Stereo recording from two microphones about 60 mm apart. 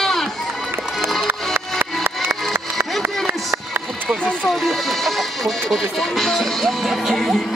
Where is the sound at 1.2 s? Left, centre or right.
Right.